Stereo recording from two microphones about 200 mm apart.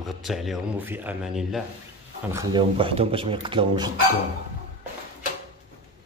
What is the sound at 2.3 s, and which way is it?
Speech, 25° right (ahead or behind).